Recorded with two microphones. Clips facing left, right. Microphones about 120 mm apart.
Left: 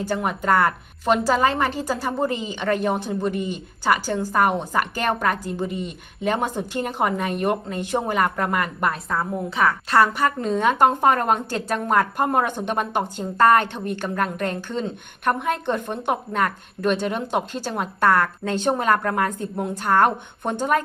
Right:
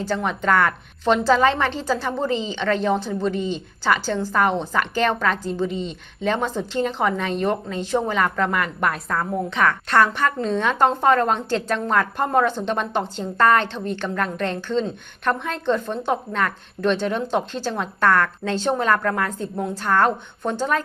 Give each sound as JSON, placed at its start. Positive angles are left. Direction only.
{"t": 0.0, "sound": "a woman's voice", "side_deg": 10}
{"t": 2.3, "sound": "a woman's voice", "side_deg": 50}
{"t": 2.6, "sound": "a woman's voice", "side_deg": 10}
{"t": 3.3, "sound": "a woman's voice", "side_deg": 50}
{"t": 3.8, "sound": "a woman's voice", "side_deg": 10}